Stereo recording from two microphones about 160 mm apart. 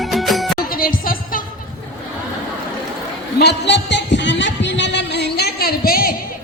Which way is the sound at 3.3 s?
90° left.